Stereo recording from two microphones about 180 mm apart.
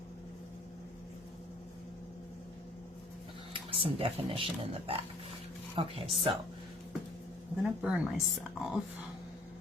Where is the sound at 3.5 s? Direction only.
30° right (ahead or behind).